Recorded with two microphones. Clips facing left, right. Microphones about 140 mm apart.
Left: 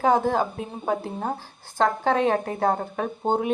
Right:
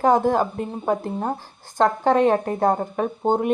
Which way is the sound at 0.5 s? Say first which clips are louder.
Right 3 dB; centre (ahead or behind).